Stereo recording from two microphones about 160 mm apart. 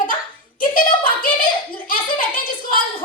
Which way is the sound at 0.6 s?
60° left (ahead or behind).